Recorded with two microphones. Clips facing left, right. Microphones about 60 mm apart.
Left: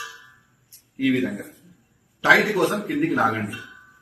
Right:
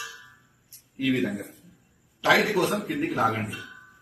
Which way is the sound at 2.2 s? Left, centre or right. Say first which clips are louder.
Left 4 dB; left.